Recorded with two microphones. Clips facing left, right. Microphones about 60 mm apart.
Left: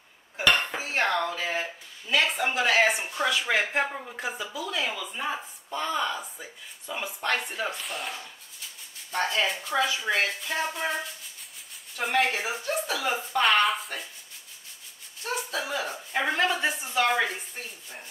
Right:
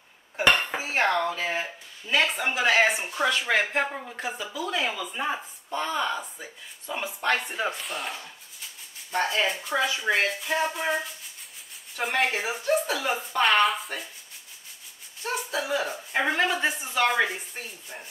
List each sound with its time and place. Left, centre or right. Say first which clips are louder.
0.7 s dishes: right 2 dB; centre
1.3 s a sound: right 1 dB; centre
2.3 s speech: right 1 dB; centre
4.6 s speech: right 3 dB; right; by 7.5 s centre
7.5 s speech: right 2 dB; centre
7.8 s speech: right 1 dB; centre
15.2 s speech: right 2 dB; centre